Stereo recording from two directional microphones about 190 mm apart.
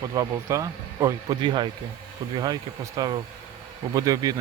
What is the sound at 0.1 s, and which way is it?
Speech, 15° right (ahead or behind).